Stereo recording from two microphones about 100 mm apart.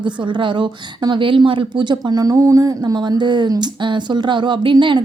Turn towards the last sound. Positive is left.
turn(degrees=-55)  # may be behind; listen again after turning